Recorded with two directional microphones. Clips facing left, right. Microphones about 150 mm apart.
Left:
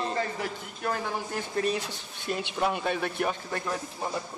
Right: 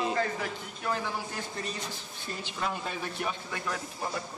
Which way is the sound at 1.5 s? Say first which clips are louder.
Left 8 dB; 60° left (ahead or behind).